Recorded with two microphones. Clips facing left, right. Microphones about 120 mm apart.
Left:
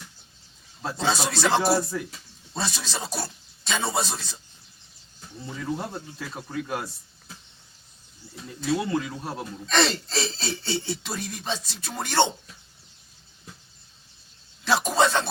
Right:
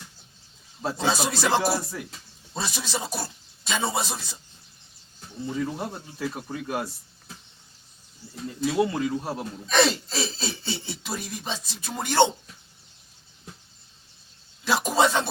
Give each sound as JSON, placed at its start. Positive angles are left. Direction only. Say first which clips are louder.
{"t": 0.8, "sound": "speech", "louder": "right 1 dB", "side_deg": -10}
{"t": 6.1, "sound": "speech", "louder": "right 4 dB", "side_deg": -10}
{"t": 8.6, "sound": "speech", "louder": "right 2 dB", "side_deg": -10}
{"t": 14.6, "sound": "a man's voice", "louder": "even", "side_deg": -15}